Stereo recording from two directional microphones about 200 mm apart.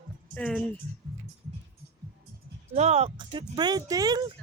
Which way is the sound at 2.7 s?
35° right (ahead or behind).